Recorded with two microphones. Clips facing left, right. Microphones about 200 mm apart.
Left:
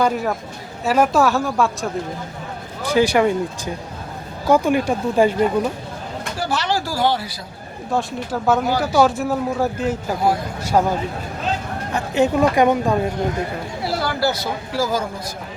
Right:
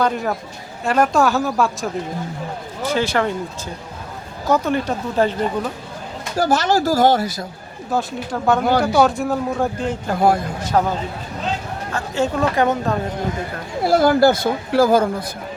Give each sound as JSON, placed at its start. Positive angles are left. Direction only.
{"t": 0.0, "sound": "speech", "side_deg": 0}
{"t": 2.9, "sound": "speech", "side_deg": 15}
{"t": 4.4, "sound": "speech", "side_deg": 10}
{"t": 6.3, "sound": "speech", "side_deg": -45}
{"t": 7.9, "sound": "speech", "side_deg": 5}
{"t": 11.9, "sound": "speech", "side_deg": 15}
{"t": 13.8, "sound": "speech", "side_deg": -50}